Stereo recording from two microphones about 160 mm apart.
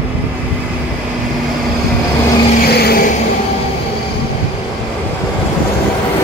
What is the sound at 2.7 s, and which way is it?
Vehicle, 80° left.